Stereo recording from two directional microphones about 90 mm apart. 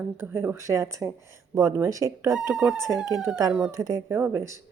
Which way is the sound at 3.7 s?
40° right (ahead or behind).